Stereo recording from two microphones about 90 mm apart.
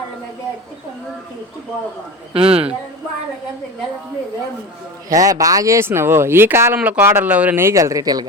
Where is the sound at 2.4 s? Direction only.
90° right.